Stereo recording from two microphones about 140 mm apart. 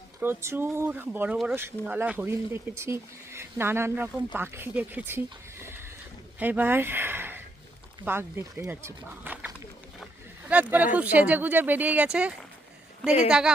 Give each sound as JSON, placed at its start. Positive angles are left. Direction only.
{"t": 0.2, "sound": "speech", "side_deg": -15}
{"t": 6.4, "sound": "speech", "side_deg": -10}
{"t": 10.5, "sound": "speech", "side_deg": -10}